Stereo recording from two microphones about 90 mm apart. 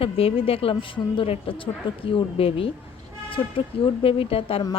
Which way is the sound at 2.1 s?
90° left.